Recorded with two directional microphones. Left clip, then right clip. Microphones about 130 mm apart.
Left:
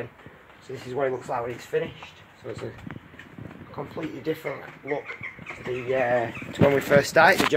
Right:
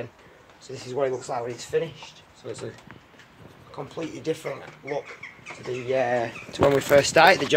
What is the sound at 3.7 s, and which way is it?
Speech, 30° left (ahead or behind).